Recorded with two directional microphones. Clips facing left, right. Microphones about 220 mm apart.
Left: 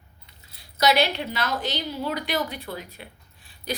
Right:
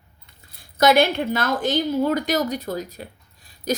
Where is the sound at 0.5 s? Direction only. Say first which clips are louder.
Right 5 dB; 50° right (ahead or behind).